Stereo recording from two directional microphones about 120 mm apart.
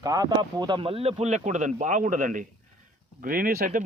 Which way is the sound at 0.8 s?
50° right (ahead or behind).